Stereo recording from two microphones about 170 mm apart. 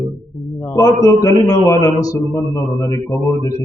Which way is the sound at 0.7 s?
20° left (ahead or behind).